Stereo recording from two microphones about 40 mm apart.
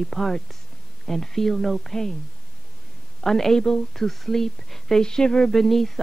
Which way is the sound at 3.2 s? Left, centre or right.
Centre.